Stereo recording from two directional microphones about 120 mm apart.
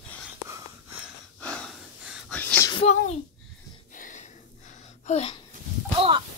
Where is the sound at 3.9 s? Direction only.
90° left; by 5.3 s 65° left (ahead or behind).